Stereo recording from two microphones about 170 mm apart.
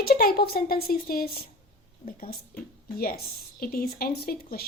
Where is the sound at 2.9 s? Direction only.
60° left (ahead or behind).